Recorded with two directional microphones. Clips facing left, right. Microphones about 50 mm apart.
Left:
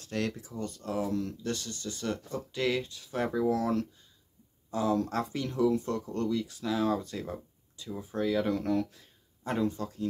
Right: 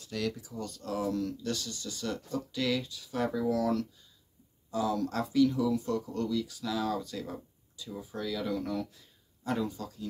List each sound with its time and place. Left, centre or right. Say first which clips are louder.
0.0 s speech: left 1 dB; left
8.5 s speech: left 4 dB; left
9.4 s speech: left 2 dB; left